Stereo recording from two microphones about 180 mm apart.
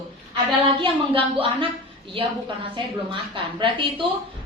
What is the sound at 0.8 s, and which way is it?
Speech, 30° right (ahead or behind).